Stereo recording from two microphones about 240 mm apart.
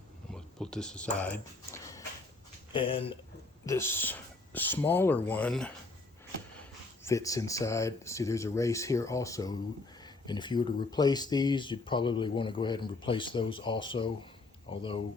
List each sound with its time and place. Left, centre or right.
0.3 s speech: centre; by 3.2 s left
3.7 s speech: centre